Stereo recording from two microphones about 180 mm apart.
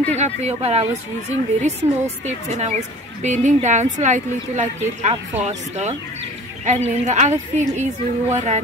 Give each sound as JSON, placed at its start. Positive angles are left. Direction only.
{"t": 0.1, "sound": "a woman's voice", "side_deg": -35}